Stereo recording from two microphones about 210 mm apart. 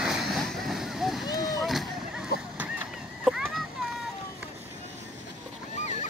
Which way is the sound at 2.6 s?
5° right (ahead or behind).